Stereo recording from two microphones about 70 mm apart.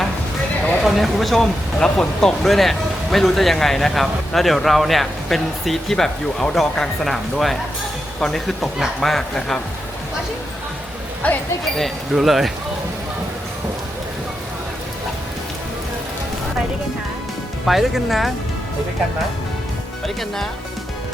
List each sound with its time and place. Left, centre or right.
0.8 s speech: centre
11.2 s speech: centre
11.8 s speech: centre
17.7 s speech: centre